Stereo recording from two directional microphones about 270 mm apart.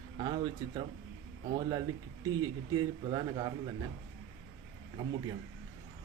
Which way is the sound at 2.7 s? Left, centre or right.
Centre.